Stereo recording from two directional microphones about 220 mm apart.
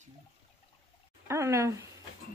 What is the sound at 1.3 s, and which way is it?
Speech, 15° right (ahead or behind).